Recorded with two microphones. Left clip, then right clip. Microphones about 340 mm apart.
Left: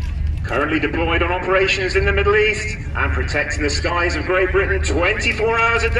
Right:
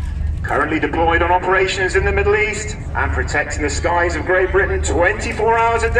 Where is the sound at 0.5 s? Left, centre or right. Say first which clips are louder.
Right 2 dB; right.